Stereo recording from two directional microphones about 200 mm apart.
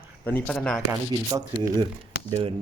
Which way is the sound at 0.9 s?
15° right (ahead or behind).